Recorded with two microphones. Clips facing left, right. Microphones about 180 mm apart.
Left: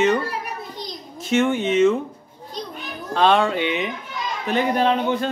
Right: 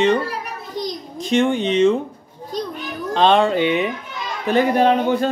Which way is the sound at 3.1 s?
30° right (ahead or behind).